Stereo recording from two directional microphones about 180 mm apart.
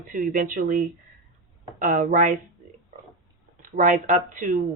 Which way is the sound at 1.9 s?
45° right (ahead or behind).